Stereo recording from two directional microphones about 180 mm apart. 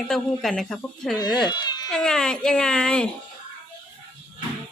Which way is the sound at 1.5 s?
25° left (ahead or behind).